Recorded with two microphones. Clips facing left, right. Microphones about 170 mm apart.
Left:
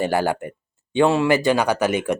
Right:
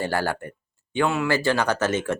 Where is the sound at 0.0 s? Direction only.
15° left (ahead or behind).